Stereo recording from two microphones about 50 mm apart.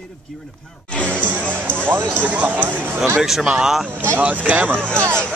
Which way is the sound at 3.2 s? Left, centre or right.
Centre.